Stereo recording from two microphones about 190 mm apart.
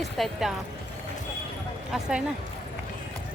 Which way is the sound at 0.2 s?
Centre (ahead or behind).